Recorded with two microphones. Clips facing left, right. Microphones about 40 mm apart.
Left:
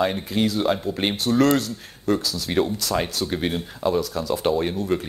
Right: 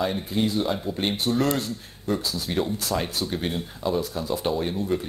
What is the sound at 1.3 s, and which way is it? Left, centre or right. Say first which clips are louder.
Speech: left 4 dB; centre.